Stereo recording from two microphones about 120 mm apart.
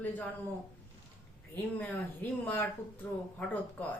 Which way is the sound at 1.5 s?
15° left (ahead or behind).